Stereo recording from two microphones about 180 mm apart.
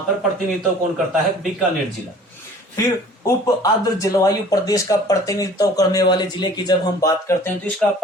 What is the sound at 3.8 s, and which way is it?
Speech, 20° left (ahead or behind).